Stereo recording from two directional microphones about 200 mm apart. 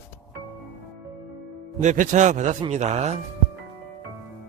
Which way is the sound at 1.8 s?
35° right (ahead or behind).